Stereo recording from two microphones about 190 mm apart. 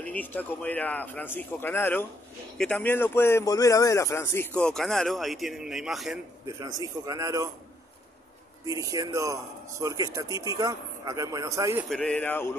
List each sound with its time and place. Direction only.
0.0 s speech: 10° left (ahead or behind)
4.6 s a man's voice: 5° left (ahead or behind)
6.8 s speech: 20° right (ahead or behind)
8.6 s speech: 20° right (ahead or behind)
11.9 s speech: 5° left (ahead or behind)